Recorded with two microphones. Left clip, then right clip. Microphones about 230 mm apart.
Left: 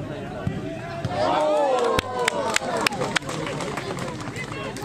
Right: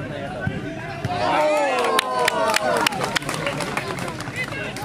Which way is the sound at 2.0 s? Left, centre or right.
Left.